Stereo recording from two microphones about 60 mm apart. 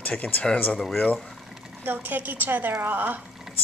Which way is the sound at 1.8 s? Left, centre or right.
Right.